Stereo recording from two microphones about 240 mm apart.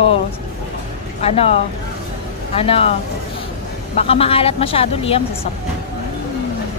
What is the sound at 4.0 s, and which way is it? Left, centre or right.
Speech, left.